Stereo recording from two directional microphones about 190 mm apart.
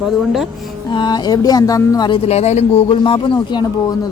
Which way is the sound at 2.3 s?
35° left (ahead or behind).